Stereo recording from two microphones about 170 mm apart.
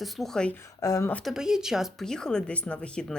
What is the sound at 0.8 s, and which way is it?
Speech, 20° left (ahead or behind).